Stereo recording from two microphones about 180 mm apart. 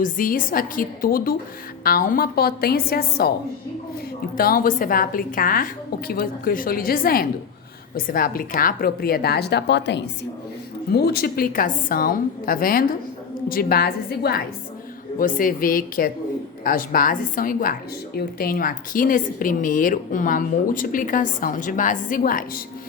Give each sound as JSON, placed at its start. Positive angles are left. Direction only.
{"t": 0.0, "sound": "a woman's voice", "side_deg": 50}
{"t": 4.4, "sound": "a woman's voice", "side_deg": 55}
{"t": 10.9, "sound": "a woman's voice", "side_deg": 60}
{"t": 15.2, "sound": "speech", "side_deg": 50}